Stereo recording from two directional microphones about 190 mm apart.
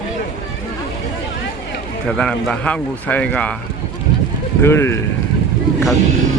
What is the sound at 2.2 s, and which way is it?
Speech, 5° left (ahead or behind).